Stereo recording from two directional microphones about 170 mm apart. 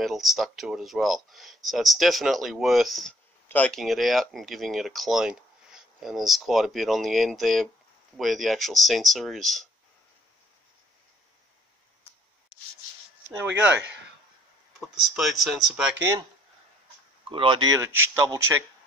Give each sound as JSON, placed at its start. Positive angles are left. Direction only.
{"t": 0.0, "sound": "speech", "side_deg": 0}
{"t": 14.8, "sound": "speech", "side_deg": 0}
{"t": 17.3, "sound": "speech", "side_deg": -30}